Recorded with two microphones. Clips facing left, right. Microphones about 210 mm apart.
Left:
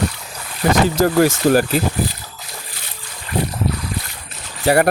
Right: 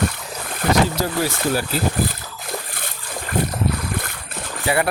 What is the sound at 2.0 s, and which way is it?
Splash, 55° right (ahead or behind).